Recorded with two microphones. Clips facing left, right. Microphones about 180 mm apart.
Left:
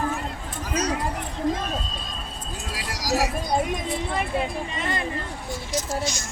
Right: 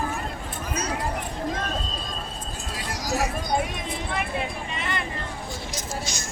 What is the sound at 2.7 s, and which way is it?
Vehicle, 90° left.